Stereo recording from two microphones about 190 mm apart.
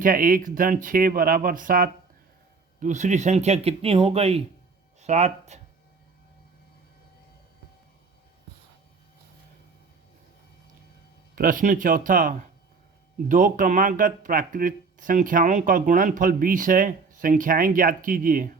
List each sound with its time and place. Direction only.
0.0 s speech: 45° right (ahead or behind)
11.3 s speech: 45° right (ahead or behind)